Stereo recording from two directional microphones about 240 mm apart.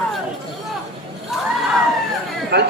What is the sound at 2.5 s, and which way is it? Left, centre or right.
Speech, right.